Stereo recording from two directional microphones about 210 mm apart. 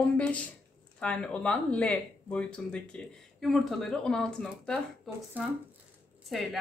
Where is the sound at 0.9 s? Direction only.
5° left (ahead or behind).